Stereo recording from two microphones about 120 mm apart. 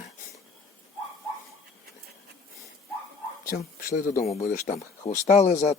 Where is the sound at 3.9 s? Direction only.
60° left (ahead or behind).